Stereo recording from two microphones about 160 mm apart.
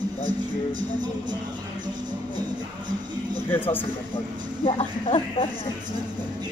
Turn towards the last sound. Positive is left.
turn(degrees=35)  # may be behind; listen again after turning